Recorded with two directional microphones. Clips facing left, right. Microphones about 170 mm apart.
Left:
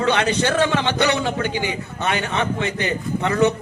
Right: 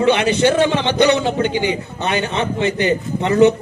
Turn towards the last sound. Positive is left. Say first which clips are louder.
# right 5 dB
turn(degrees=-20)  # may be behind; listen again after turning